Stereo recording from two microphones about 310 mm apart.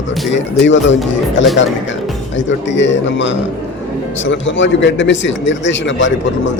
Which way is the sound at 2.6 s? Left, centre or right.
Left.